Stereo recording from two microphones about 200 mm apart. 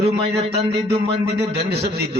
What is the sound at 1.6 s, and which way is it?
Speech, 55° right (ahead or behind).